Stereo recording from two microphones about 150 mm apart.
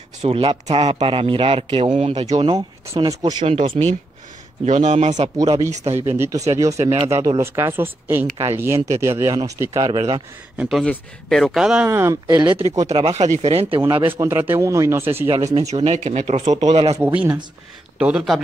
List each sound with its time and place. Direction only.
0.2 s speech: 40° right (ahead or behind)
2.5 s speech: 25° right (ahead or behind)
3.4 s speech: 40° right (ahead or behind)
6.1 s speech: 15° right (ahead or behind)
10.6 s a man's voice: centre (ahead or behind)
11.8 s speech: 20° right (ahead or behind)
12.3 s speech: 30° right (ahead or behind)
12.8 s speech: 45° right (ahead or behind)
14.2 s speech: 15° right (ahead or behind)
15.5 s speech: 45° right (ahead or behind)
17.0 s a man's voice: 10° right (ahead or behind)